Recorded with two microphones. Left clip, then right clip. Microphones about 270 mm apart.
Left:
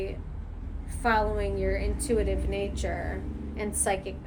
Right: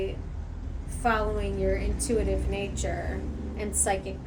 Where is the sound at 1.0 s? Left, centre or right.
Centre.